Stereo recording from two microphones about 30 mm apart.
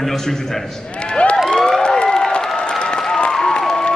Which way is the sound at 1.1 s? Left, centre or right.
Left.